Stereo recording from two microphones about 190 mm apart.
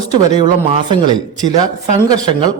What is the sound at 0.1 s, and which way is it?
Speech, 20° right (ahead or behind).